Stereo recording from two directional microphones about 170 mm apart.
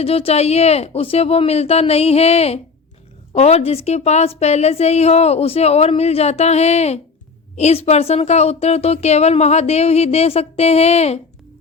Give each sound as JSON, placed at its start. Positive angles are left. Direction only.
{"t": 0.0, "sound": "speech", "side_deg": 35}